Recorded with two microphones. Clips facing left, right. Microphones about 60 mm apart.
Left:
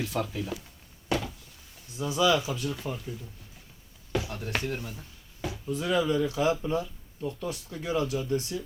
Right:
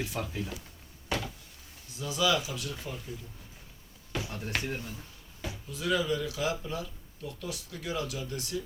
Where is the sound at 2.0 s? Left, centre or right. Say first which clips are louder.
Left 4 dB; left.